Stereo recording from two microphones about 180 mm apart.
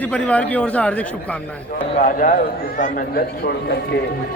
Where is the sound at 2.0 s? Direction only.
50° left (ahead or behind).